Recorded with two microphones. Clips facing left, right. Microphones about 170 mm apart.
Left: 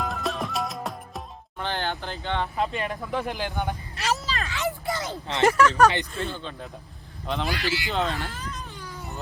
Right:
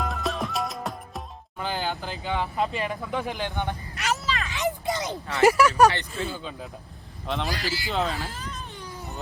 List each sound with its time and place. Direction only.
0.0 s music: centre (ahead or behind)
3.9 s vehicle: 35° left (ahead or behind)
4.4 s a sound: 20° right (ahead or behind)
5.4 s speech: 10° right (ahead or behind)
7.4 s speech: 40° right (ahead or behind)
7.9 s speech: centre (ahead or behind)